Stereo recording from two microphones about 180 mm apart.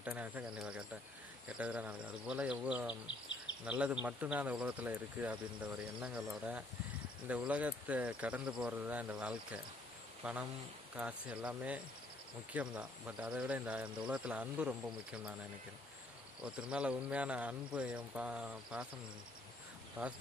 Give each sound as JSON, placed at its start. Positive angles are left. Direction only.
{"t": 0.0, "sound": "speech", "side_deg": -10}
{"t": 3.1, "sound": "insect", "side_deg": 90}
{"t": 3.7, "sound": "speech", "side_deg": -5}
{"t": 16.4, "sound": "speech", "side_deg": -5}
{"t": 20.0, "sound": "speech", "side_deg": -10}